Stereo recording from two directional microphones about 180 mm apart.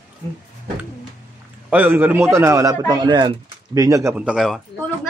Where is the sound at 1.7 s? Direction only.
10° right (ahead or behind).